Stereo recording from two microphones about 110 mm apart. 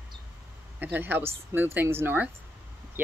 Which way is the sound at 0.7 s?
15° right (ahead or behind).